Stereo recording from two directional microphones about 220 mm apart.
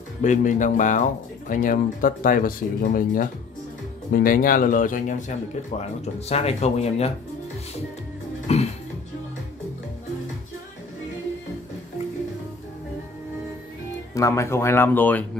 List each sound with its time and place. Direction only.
0.2 s speech: 35° left (ahead or behind)
8.5 s music: 30° left (ahead or behind)
14.1 s speech: 15° left (ahead or behind)